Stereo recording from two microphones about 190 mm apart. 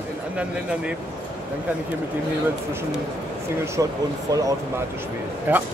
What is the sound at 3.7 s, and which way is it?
Speech, 15° right (ahead or behind).